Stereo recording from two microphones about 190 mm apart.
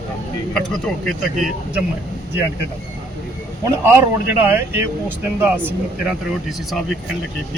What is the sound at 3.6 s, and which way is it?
Speech, 10° right (ahead or behind).